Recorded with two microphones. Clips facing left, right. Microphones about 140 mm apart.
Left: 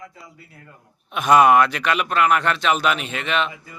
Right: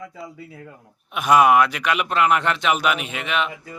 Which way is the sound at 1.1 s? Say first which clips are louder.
Left 1 dB; 5° right (ahead or behind).